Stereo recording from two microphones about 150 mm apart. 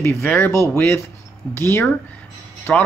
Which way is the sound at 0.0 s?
15° left (ahead or behind).